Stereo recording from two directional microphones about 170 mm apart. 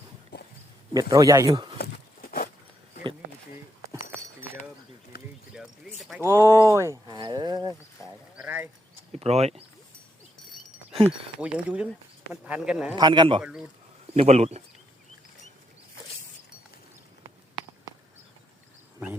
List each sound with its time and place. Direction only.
0.3 s wild animals: 75° left (ahead or behind)
0.9 s a man's voice: 20° right (ahead or behind)
1.8 s a sound: 60° left (ahead or behind)
3.5 s a sound: 15° right (ahead or behind)
5.1 s bird: 65° left (ahead or behind)
5.5 s a sound: 5° right (ahead or behind)
6.2 s speech: 15° right (ahead or behind)
8.4 s bird: 10° right (ahead or behind)
9.1 s speech: 40° right (ahead or behind)
11.3 s speech: 5° right (ahead or behind)
13.0 s a man's voice: 25° right (ahead or behind)
13.4 s speech: 5° right (ahead or behind)
14.2 s speech: 40° right (ahead or behind)